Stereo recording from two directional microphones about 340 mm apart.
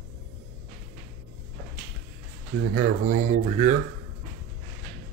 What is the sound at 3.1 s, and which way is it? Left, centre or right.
Speech, right.